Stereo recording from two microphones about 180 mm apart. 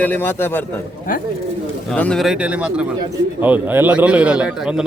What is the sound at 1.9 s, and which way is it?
A man's voice, 5° left (ahead or behind).